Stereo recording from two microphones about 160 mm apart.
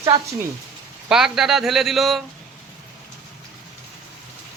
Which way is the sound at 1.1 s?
5° right (ahead or behind).